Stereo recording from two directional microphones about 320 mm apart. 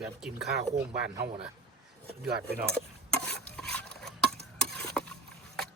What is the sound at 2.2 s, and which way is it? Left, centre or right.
Speech, right.